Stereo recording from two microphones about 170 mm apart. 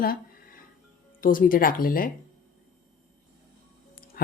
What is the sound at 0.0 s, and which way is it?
Music, 60° left (ahead or behind).